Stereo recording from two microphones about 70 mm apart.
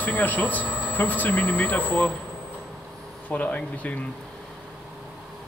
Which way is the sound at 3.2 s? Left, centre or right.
Left.